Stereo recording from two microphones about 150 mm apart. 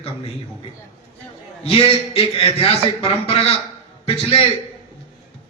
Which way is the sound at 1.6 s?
40° left (ahead or behind).